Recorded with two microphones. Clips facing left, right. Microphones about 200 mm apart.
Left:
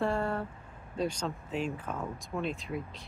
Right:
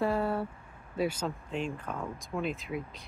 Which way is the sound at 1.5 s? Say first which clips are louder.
Left 1 dB; 5° left (ahead or behind).